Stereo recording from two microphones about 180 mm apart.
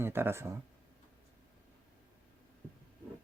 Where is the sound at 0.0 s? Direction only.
15° right (ahead or behind).